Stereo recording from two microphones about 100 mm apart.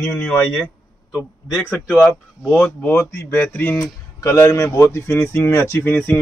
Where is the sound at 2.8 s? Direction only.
25° left (ahead or behind).